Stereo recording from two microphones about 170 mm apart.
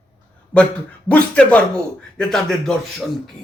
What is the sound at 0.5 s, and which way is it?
A man's voice, 5° left (ahead or behind).